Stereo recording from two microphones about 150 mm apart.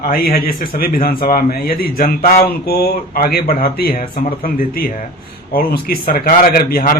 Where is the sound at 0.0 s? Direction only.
75° left (ahead or behind).